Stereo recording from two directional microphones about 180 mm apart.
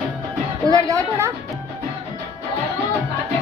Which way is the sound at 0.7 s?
15° right (ahead or behind).